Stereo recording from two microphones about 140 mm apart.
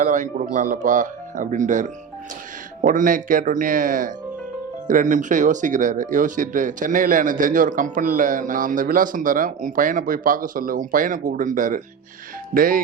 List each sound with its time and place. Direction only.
0.0 s a man's voice: 65° right (ahead or behind)
12.5 s speech: 80° right